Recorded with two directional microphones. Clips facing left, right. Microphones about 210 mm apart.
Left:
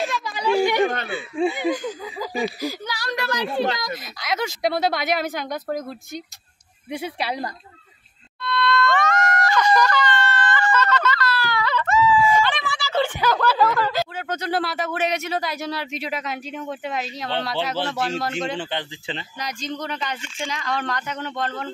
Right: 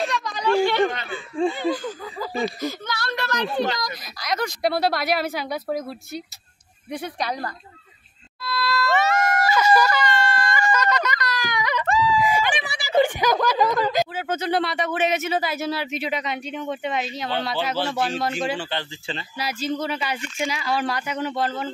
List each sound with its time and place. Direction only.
0.0 s a sound: 5° left (ahead or behind)
1.1 s speech: 10° left (ahead or behind)
3.8 s a woman's voice: centre (ahead or behind)
6.9 s speech: 5° left (ahead or behind)
8.4 s screaming: 5° right (ahead or behind)
11.9 s wail: 35° right (ahead or behind)
12.2 s a sound: 15° right (ahead or behind)
14.1 s speech: 5° right (ahead or behind)
18.6 s speech: 20° left (ahead or behind)
19.3 s screaming: 5° right (ahead or behind)